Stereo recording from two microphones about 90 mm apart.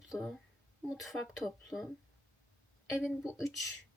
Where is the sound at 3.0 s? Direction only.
Centre (ahead or behind).